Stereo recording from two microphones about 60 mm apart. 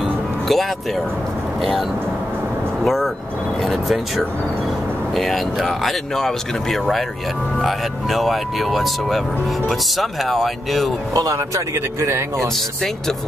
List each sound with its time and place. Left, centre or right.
0.5 s speech: centre
5.1 s speech: centre
11.1 s speech: right
11.7 s speech: right
12.4 s speech: centre